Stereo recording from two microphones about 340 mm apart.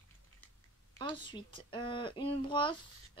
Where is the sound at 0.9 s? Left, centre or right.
Centre.